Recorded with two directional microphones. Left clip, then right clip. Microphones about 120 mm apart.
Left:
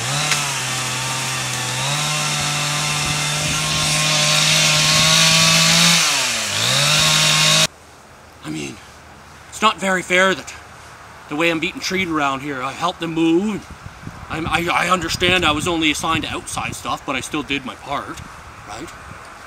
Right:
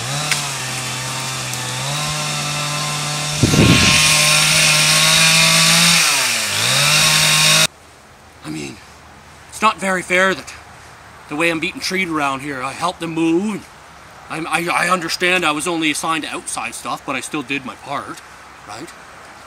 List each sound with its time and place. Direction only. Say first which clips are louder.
0.5 s a sound: left 2 dB; 25° left (ahead or behind)
1.3 s chainsaw: left 1 dB; 25° left (ahead or behind)
3.4 s vehicle: right 11 dB; 25° right (ahead or behind)
4.3 s chainsaw: right 2 dB; 5° right (ahead or behind)
8.5 s a sound: even; centre (ahead or behind)
9.6 s speech: right 1 dB; centre (ahead or behind)